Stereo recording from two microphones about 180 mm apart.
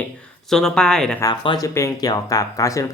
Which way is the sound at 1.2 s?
25° left (ahead or behind).